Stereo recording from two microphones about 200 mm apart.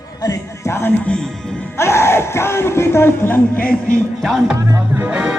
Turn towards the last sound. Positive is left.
turn(degrees=-5)  # may be behind; listen again after turning